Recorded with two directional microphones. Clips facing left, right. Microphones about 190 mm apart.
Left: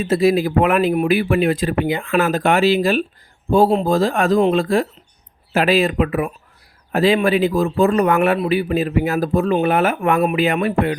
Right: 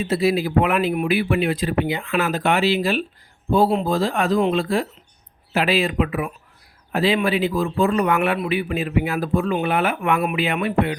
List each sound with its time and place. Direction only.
0.0 s a man's voice: 45° left (ahead or behind)